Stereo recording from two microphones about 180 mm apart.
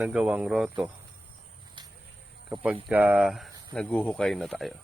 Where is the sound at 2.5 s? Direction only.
10° right (ahead or behind).